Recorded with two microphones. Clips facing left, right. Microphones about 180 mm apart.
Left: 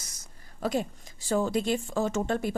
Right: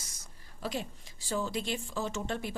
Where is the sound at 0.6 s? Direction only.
45° left (ahead or behind).